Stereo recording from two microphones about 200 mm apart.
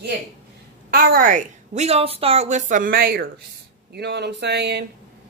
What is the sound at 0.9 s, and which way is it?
A woman's voice, 45° right (ahead or behind).